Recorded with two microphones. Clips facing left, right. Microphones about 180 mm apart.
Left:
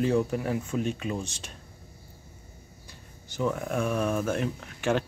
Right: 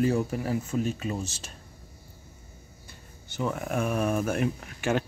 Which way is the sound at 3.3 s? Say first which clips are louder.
Left 1 dB; 5° right (ahead or behind).